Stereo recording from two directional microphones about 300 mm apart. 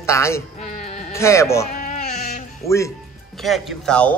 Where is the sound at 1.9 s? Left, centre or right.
Left.